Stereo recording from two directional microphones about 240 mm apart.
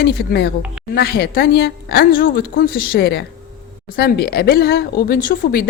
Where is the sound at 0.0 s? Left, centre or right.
Left.